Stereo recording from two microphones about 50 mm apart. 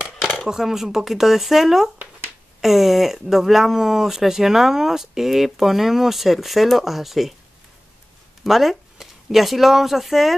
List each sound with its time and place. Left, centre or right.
0.0 s dishes: centre
0.5 s speech: centre
8.5 s speech: centre